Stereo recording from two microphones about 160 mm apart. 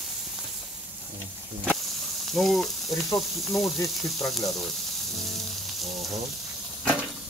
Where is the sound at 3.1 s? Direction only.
Centre (ahead or behind).